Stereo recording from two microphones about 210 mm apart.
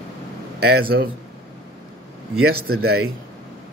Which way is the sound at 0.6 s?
50° right (ahead or behind).